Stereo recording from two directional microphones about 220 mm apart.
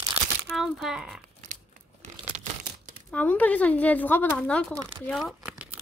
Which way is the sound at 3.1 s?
5° left (ahead or behind).